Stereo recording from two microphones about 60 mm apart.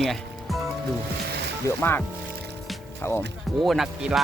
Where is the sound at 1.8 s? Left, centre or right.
Left.